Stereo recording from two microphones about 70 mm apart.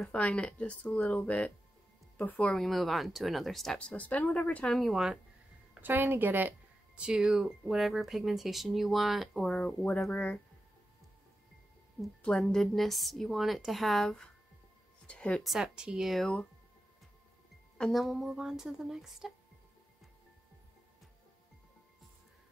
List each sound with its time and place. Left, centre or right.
0.0 s speech: centre
2.5 s speech: centre
3.7 s speech: left
4.6 s speech: centre
5.8 s a woman's voice: right
7.0 s speech: centre
12.4 s speech: centre
15.0 s speech: centre
15.4 s speech: centre
16.1 s speech: centre
17.9 s speech: centre